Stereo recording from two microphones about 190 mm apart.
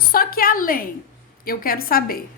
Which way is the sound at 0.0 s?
50° left (ahead or behind).